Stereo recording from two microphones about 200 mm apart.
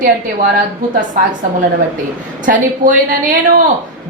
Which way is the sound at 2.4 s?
40° right (ahead or behind).